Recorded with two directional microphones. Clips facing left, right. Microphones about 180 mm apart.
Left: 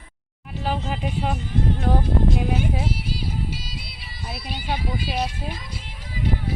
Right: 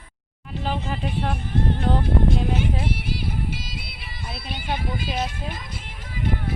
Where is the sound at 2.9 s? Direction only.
55° right (ahead or behind).